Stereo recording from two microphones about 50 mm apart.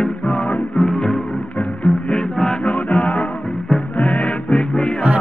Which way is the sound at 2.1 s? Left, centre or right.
Centre.